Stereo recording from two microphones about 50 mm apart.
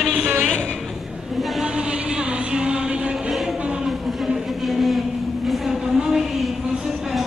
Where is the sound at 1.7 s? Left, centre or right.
Centre.